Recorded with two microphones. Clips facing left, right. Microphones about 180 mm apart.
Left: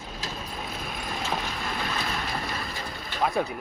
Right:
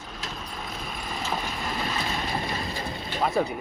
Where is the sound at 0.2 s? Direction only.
10° left (ahead or behind).